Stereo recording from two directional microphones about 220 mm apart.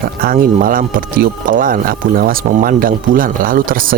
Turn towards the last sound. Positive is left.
turn(degrees=-40)  # may be behind; listen again after turning